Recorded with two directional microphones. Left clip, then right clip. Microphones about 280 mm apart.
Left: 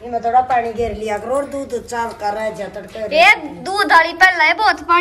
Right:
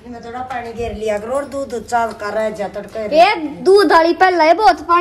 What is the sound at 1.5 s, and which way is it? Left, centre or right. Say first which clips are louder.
Speech: right 4 dB; centre.